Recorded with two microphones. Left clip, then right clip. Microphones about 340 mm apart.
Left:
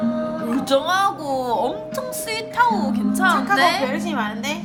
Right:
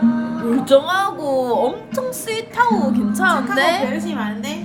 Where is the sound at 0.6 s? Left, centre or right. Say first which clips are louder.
Right 3 dB; centre.